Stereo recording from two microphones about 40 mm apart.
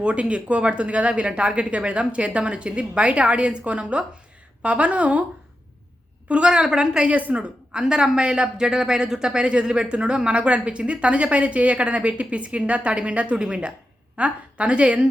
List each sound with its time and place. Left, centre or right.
0.0 s a woman's voice: right
6.2 s a woman's voice: right
6.5 s speech: centre
7.1 s a woman's voice: right
7.8 s a woman's voice: centre
8.5 s speech: centre
9.4 s a woman's voice: right